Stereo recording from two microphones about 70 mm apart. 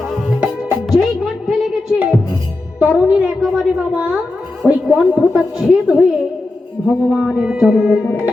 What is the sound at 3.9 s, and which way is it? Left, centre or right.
A woman's voice, right.